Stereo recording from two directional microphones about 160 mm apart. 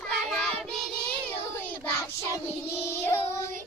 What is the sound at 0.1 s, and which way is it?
Child singing, 5° left (ahead or behind).